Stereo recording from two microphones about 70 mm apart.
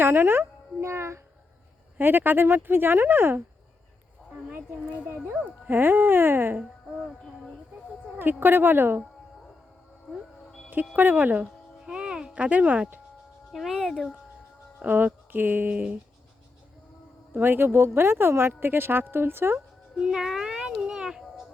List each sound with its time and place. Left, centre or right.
0.0 s speech: right
2.0 s speech: right
4.5 s speech: right
8.2 s speech: right
10.9 s speech: right
11.9 s music: centre
13.5 s speech: centre
14.8 s speech: right
17.3 s speech: right
20.0 s child singing: centre